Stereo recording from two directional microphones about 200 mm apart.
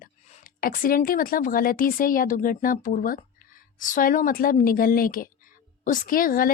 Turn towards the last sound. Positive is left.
turn(degrees=45)  # may be behind; listen again after turning